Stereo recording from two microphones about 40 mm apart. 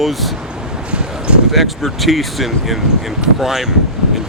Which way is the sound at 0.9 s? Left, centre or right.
Right.